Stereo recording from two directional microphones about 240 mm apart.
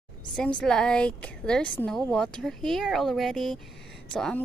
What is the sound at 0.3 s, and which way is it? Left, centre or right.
A woman's voice, centre.